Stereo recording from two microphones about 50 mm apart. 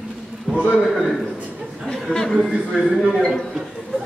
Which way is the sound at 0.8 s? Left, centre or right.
Centre.